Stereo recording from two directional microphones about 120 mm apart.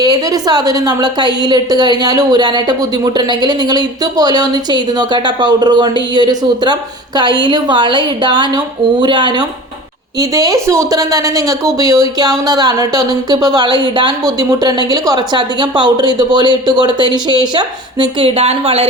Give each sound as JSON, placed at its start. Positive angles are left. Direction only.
{"t": 0.0, "sound": "a woman's voice", "side_deg": -30}
{"t": 10.2, "sound": "a woman's voice", "side_deg": -30}
{"t": 18.3, "sound": "speech", "side_deg": -55}